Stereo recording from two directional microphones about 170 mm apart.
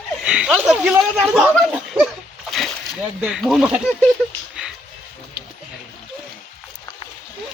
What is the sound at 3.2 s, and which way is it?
Speech, 5° right (ahead or behind).